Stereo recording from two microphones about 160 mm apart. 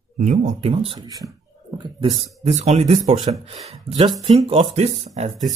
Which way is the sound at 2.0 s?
25° right (ahead or behind).